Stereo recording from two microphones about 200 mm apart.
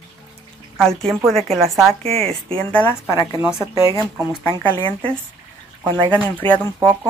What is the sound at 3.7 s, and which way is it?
Speech, 15° right (ahead or behind).